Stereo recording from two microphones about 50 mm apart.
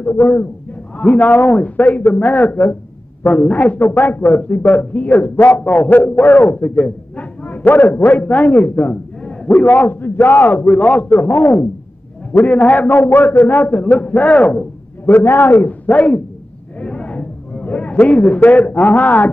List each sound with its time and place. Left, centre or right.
0.0 s a man's voice: left
0.9 s a man's voice: left
6.6 s a man's voice: left
9.2 s a sound: left
9.7 s a man's voice: left
11.1 s a man's voice: left
12.4 s a man's voice: left
13.7 s a man's voice: left
15.0 s a man's voice: left
15.6 s a man's voice: left
16.8 s a sound: left
17.9 s a man's voice: left